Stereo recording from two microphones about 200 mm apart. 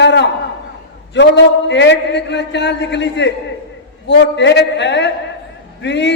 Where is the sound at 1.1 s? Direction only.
60° left (ahead or behind).